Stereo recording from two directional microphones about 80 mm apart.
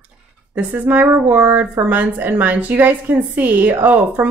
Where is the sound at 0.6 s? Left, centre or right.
Right.